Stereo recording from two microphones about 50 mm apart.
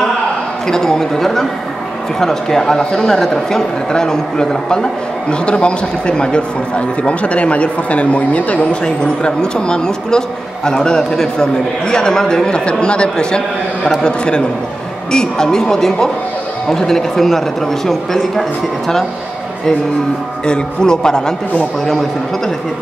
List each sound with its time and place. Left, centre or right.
0.7 s speech: centre; by 8.6 s left
8.8 s speech: centre
20.4 s speech: centre